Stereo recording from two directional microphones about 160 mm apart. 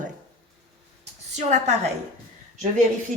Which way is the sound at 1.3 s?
45° right (ahead or behind).